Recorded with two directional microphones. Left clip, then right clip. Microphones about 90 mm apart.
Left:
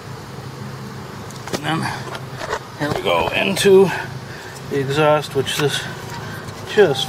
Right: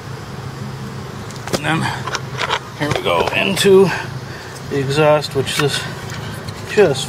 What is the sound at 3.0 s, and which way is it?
Speech, 20° left (ahead or behind).